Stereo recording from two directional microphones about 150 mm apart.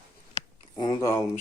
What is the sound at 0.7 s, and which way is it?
Speech, 25° left (ahead or behind).